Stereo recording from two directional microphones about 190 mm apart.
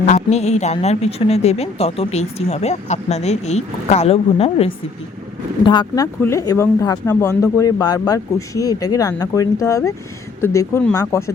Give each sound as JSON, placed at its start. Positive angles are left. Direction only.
{"t": 0.0, "sound": "a woman's voice", "side_deg": 35}